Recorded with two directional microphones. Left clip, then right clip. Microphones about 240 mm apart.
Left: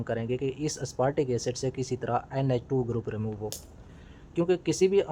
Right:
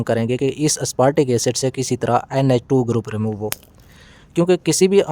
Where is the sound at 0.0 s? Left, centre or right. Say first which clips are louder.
Right 11 dB; right.